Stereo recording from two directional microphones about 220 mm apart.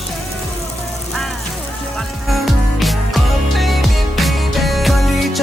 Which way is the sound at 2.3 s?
Centre (ahead or behind).